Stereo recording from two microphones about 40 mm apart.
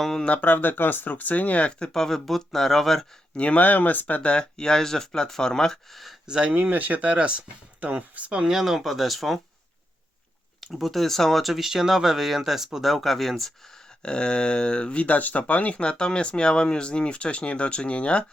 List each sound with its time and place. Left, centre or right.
0.0 s speech: centre
0.4 s speech: left
1.8 s speech: centre
3.3 s speech: left
4.3 s speech: left
5.9 s speech: centre
6.5 s speech: right
8.3 s speech: centre
8.5 s speech: centre
10.7 s speech: centre
14.0 s speech: left
15.8 s speech: left